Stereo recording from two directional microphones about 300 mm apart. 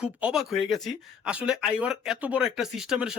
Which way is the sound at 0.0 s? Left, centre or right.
Centre.